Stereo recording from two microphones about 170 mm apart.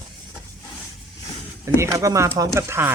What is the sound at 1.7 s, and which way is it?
Speech, 15° right (ahead or behind).